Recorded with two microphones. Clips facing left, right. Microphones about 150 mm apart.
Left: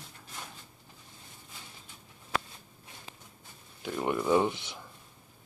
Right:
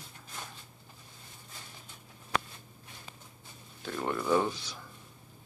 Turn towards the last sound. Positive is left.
turn(degrees=20)  # may be behind; listen again after turning